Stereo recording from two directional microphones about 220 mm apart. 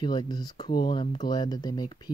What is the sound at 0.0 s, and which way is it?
Speech, 20° left (ahead or behind).